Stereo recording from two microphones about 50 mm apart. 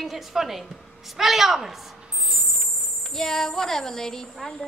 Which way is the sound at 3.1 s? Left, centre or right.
Centre.